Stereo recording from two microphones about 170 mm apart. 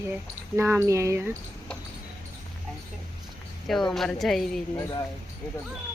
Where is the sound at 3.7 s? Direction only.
Centre (ahead or behind).